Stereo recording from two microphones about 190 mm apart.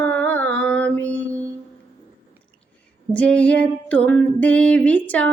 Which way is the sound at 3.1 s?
5° left (ahead or behind).